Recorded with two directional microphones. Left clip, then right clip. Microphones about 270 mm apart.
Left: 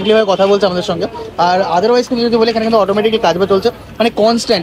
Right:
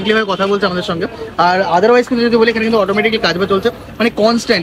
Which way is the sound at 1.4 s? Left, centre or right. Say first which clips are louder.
Even; centre.